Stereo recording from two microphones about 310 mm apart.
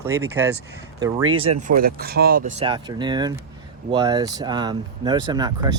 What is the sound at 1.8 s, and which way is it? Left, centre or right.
Speech, right.